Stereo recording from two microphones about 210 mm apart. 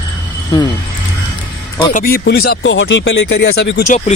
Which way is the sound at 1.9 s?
45° left (ahead or behind).